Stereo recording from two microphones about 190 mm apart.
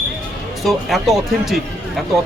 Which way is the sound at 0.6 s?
Centre (ahead or behind).